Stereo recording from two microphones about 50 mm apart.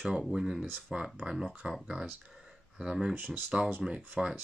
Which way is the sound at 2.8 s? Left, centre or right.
Centre.